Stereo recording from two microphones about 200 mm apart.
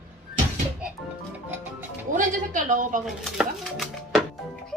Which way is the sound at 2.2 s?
40° right (ahead or behind).